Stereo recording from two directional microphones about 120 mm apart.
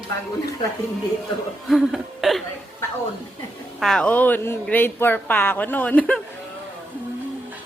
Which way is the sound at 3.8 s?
5° left (ahead or behind).